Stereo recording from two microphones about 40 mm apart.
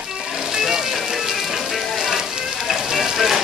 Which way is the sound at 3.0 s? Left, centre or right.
Centre.